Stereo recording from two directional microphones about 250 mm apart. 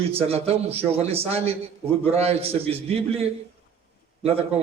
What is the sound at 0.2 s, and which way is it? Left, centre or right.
A man's voice, right.